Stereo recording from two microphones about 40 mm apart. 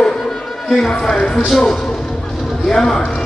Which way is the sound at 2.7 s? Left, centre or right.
Centre.